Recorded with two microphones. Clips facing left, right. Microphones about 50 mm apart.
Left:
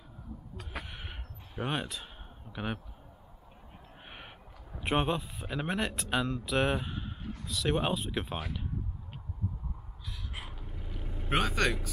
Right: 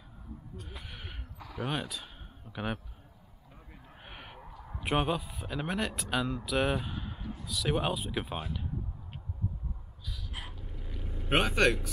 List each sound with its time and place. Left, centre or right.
0.8 s a sound: centre
2.5 s speech: centre
4.0 s crow: centre
4.4 s a sound: right
4.7 s speech: centre
11.2 s a man's voice: centre